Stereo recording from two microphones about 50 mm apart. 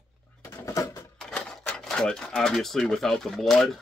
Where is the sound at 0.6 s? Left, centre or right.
Left.